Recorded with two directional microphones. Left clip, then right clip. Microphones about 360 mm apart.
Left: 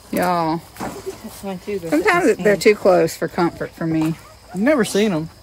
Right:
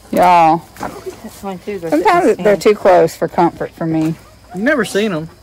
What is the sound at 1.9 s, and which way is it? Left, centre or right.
Speech, centre.